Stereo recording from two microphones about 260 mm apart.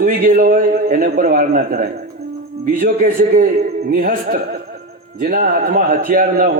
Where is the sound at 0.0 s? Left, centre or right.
Right.